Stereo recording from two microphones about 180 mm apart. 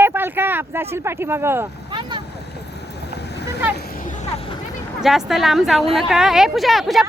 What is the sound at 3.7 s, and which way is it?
Vehicle, 50° left (ahead or behind).